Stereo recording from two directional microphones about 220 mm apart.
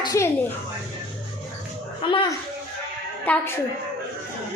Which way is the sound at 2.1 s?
20° left (ahead or behind).